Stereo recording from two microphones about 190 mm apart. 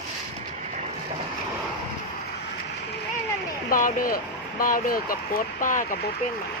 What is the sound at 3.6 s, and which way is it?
Speech, 45° left (ahead or behind).